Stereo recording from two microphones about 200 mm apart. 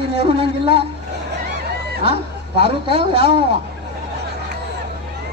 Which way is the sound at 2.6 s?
25° right (ahead or behind).